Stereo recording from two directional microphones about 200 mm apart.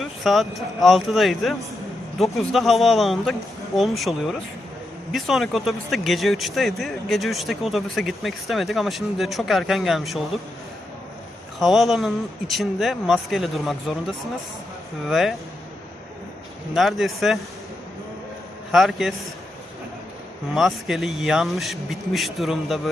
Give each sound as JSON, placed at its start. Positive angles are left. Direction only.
{"t": 0.0, "sound": "a sound", "side_deg": 0}
{"t": 0.8, "sound": "speech", "side_deg": 0}
{"t": 11.6, "sound": "speech", "side_deg": 0}
{"t": 16.7, "sound": "speech", "side_deg": 0}
{"t": 18.7, "sound": "speech", "side_deg": 0}
{"t": 20.5, "sound": "speech", "side_deg": 0}